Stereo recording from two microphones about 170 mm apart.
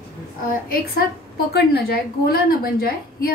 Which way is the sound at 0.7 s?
65° left (ahead or behind).